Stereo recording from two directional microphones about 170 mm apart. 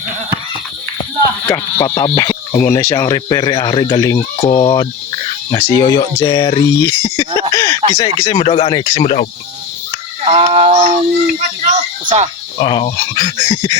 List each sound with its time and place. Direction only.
1.8 s speech: 25° left (ahead or behind)
7.5 s a sound: 20° left (ahead or behind)
7.9 s speech: 25° left (ahead or behind)
10.2 s fowl: 35° right (ahead or behind)
11.6 s a sound: 45° right (ahead or behind)
12.5 s speech: 30° left (ahead or behind)